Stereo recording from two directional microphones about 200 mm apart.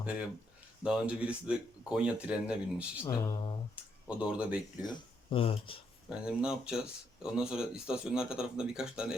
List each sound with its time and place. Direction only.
0.8 s speech: 5° right (ahead or behind)
3.1 s speech: 20° left (ahead or behind)
4.2 s speech: 5° right (ahead or behind)
4.8 s speech: 25° left (ahead or behind)
6.1 s speech: 5° right (ahead or behind)